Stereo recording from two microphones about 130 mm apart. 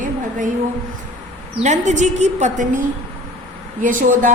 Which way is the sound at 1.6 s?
65° right (ahead or behind).